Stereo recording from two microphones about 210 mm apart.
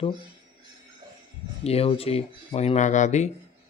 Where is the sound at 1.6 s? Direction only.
30° left (ahead or behind).